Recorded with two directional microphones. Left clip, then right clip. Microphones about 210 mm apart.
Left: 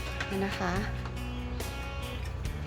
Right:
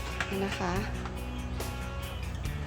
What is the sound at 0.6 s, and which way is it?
Speech, 5° left (ahead or behind).